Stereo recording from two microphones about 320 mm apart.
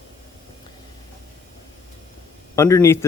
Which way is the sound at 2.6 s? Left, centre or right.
Centre.